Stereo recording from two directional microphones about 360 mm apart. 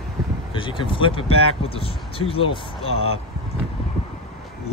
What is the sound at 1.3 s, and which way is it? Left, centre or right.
Speech, left.